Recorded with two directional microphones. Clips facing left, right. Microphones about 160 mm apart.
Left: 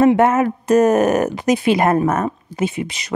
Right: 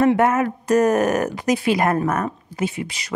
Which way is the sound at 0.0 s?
25° left (ahead or behind).